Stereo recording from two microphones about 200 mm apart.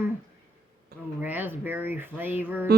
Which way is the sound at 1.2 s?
10° right (ahead or behind).